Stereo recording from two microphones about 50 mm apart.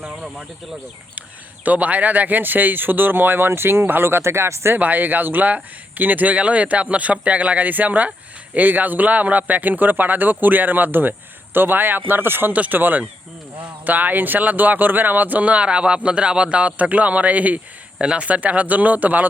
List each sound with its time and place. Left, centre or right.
1.6 s speech: right
4.7 s speech: right
12.5 s speech: right